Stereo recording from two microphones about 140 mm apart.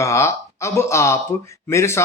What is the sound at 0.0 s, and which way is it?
Speech, 20° left (ahead or behind).